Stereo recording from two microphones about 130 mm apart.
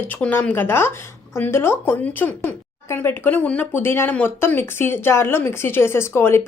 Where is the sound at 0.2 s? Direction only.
10° left (ahead or behind).